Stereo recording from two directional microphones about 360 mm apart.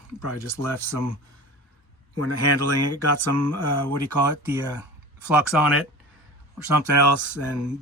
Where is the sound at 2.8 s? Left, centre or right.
Right.